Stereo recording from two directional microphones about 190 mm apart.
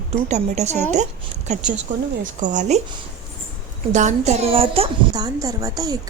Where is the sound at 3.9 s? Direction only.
40° right (ahead or behind); by 6.0 s 20° right (ahead or behind).